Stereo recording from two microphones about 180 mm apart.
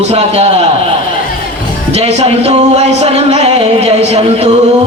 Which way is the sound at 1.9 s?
35° right (ahead or behind).